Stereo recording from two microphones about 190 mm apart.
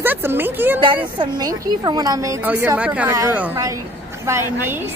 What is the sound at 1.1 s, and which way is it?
A woman's voice, 20° right (ahead or behind).